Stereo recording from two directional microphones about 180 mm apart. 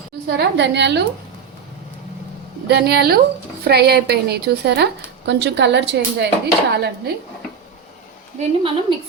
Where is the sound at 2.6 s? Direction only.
65° right (ahead or behind).